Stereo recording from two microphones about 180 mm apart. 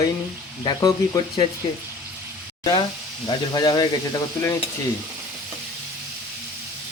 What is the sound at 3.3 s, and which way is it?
Speech, 25° left (ahead or behind).